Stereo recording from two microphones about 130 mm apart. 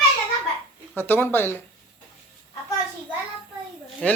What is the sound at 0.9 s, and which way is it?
Speech, 15° left (ahead or behind).